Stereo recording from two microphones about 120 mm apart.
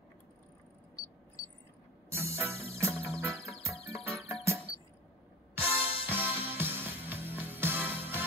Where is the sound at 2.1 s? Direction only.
20° right (ahead or behind).